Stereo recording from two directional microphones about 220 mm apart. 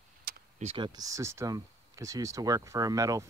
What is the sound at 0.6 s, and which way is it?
Speech, 20° right (ahead or behind).